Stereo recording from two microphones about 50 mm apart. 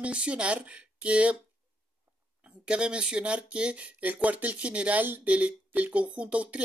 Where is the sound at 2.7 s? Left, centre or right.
Centre.